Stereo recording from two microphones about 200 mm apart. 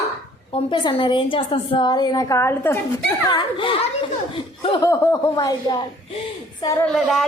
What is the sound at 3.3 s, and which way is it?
A woman's voice, 25° left (ahead or behind).